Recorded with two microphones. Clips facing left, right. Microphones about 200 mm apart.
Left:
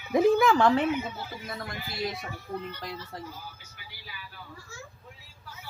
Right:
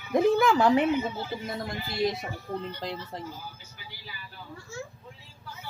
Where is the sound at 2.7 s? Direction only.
25° right (ahead or behind).